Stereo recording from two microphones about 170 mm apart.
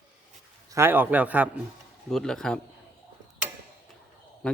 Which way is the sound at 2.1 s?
5° left (ahead or behind).